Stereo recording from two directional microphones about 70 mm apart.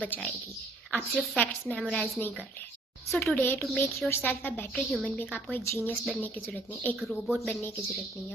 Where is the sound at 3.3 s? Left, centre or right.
Left.